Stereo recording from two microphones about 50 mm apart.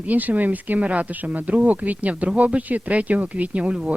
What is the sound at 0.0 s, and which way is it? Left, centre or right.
Speech, right.